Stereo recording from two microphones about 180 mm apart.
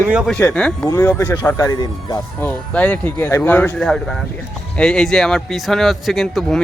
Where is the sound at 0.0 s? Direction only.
10° right (ahead or behind).